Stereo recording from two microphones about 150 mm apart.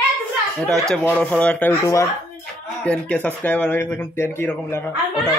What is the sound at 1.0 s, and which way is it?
Speech, 10° left (ahead or behind).